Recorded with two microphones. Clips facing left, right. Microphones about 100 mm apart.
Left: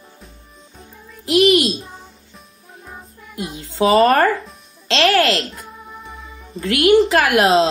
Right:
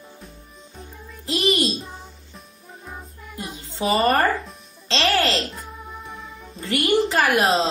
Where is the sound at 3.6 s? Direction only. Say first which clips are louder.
Left 8 dB; 90° left.